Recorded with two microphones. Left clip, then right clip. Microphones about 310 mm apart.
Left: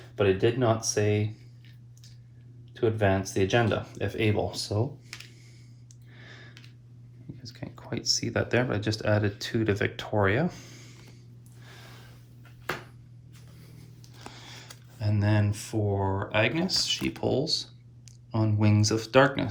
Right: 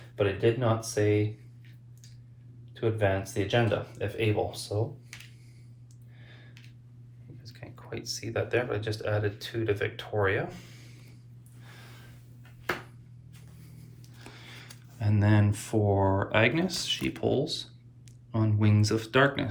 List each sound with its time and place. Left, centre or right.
0.2 s speech: left
2.7 s speech: left
6.1 s a sound: left
7.4 s speech: centre
14.3 s speech: centre